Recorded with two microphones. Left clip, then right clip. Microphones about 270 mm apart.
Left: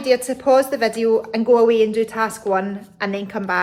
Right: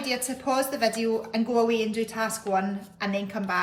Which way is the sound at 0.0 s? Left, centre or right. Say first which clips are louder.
Left 11 dB; centre.